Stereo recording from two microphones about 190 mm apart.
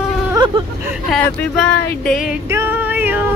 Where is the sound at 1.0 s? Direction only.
5° left (ahead or behind).